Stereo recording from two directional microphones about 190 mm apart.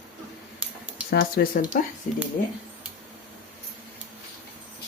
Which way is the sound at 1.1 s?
55° left (ahead or behind).